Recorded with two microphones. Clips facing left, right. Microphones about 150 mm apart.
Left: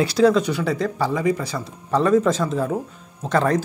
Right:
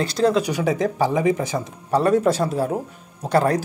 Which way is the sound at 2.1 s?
35° right (ahead or behind).